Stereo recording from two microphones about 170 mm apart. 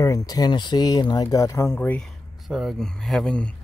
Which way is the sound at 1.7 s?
5° left (ahead or behind).